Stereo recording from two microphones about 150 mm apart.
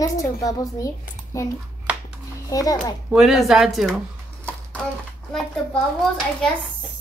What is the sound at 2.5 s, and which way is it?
Speech, 25° left (ahead or behind).